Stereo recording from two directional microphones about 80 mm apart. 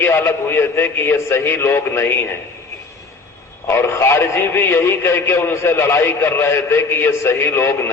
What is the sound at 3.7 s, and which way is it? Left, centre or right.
A man's voice, left.